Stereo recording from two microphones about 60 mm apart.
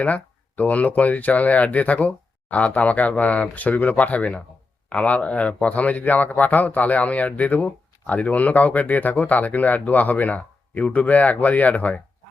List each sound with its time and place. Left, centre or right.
0.0 s speech: left